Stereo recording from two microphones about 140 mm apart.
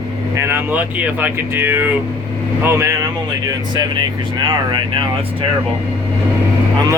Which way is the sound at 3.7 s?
30° right (ahead or behind).